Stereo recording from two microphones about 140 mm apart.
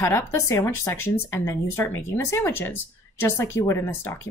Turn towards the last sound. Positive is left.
turn(degrees=15)  # may be behind; listen again after turning